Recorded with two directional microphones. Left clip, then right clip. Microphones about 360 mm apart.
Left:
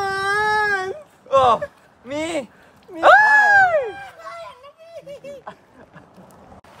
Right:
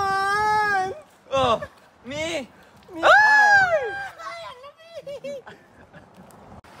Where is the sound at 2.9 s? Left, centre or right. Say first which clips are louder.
Left 3 dB; centre.